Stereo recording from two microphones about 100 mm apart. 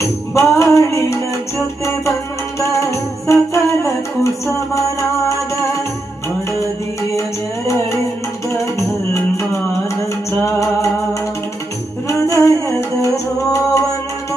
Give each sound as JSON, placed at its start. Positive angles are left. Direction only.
{"t": 0.0, "sound": "music", "side_deg": 30}
{"t": 9.1, "sound": "music", "side_deg": 30}
{"t": 12.0, "sound": "music", "side_deg": 30}